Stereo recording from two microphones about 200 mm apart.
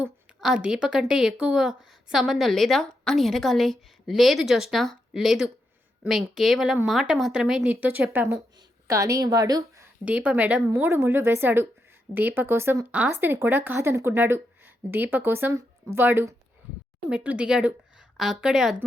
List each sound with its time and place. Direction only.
0.0 s a woman's voice: 5° right (ahead or behind)